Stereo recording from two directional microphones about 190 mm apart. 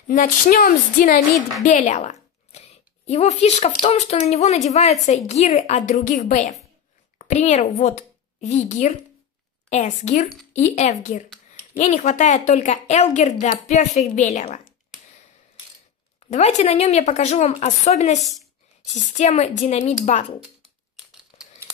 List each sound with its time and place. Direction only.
0.1 s a sound: 45° left (ahead or behind)
1.6 s a woman's voice: 40° left (ahead or behind)
16.3 s a woman's voice: 35° left (ahead or behind)
18.2 s a woman's voice: centre (ahead or behind)
19.1 s a woman's voice: 35° left (ahead or behind)
21.3 s crumpling: 30° left (ahead or behind)